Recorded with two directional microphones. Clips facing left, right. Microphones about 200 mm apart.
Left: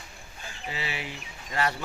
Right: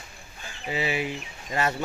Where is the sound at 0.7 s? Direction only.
15° right (ahead or behind).